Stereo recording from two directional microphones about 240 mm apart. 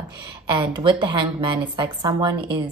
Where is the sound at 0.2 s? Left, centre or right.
Centre.